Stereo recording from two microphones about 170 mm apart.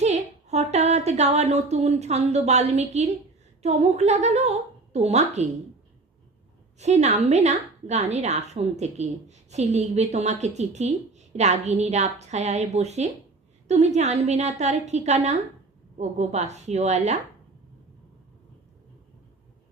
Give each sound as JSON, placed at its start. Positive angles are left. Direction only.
{"t": 0.0, "sound": "a woman's voice", "side_deg": -40}
{"t": 6.8, "sound": "a woman's voice", "side_deg": -40}